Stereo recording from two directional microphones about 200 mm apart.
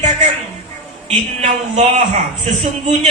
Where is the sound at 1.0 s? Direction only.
30° right (ahead or behind).